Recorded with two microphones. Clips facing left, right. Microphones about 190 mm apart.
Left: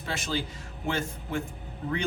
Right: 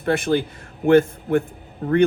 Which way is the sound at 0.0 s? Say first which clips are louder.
Right 12 dB; 55° right (ahead or behind).